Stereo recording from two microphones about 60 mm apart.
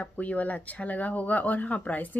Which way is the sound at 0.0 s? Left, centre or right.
Left.